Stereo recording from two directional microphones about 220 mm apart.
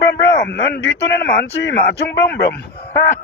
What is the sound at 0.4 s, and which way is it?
Speech, 50° left (ahead or behind).